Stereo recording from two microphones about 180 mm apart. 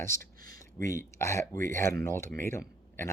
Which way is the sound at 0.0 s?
15° left (ahead or behind).